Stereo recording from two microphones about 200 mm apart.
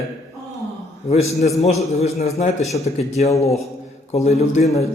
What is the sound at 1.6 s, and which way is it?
A man's voice, 30° left (ahead or behind).